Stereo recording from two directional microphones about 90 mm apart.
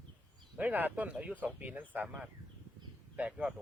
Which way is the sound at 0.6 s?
20° right (ahead or behind).